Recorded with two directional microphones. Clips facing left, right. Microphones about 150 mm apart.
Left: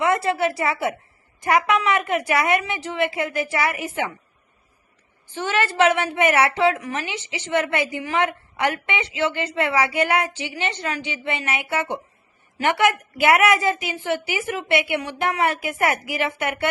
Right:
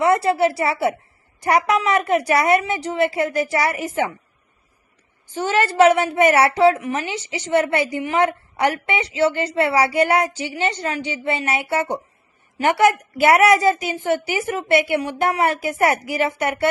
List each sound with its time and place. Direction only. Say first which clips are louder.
0.0 s a woman's voice: right 4 dB; 35° right (ahead or behind)
5.3 s a woman's voice: right 3 dB; 40° right (ahead or behind)